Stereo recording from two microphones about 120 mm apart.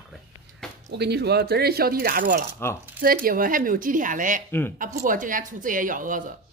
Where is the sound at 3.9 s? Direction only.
90° right.